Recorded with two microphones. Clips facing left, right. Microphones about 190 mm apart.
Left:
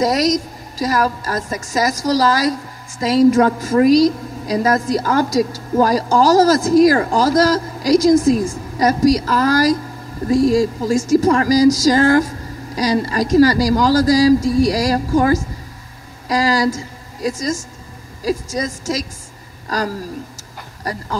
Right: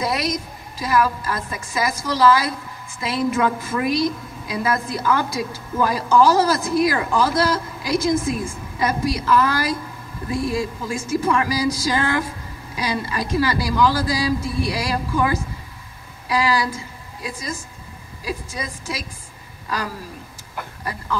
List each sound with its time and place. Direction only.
0.0 s a woman's voice: 40° left (ahead or behind)